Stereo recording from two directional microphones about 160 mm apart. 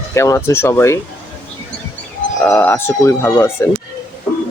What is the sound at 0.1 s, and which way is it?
Speech, 20° left (ahead or behind).